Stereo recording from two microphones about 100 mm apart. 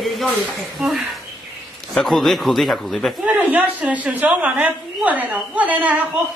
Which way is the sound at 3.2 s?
15° right (ahead or behind).